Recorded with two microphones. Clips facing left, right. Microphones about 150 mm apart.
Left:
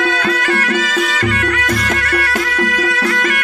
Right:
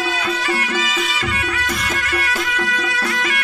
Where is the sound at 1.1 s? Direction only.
45° left (ahead or behind).